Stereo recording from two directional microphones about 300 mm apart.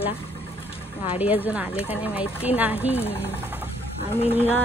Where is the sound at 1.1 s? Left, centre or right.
Centre.